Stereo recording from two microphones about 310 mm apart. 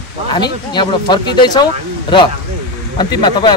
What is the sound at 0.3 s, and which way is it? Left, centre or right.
Speech, centre.